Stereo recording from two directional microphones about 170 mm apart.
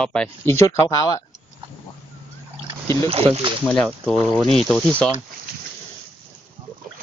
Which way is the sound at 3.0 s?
35° right (ahead or behind).